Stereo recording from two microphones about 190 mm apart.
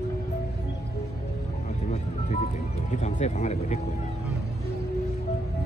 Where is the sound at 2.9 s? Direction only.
40° left (ahead or behind).